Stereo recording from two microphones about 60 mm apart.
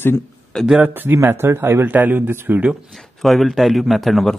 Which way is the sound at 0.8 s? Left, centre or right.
Right.